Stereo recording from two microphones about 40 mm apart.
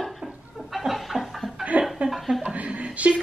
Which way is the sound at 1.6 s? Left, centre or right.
Right.